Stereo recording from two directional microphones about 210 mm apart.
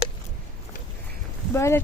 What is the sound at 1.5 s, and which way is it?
Speech, 10° left (ahead or behind).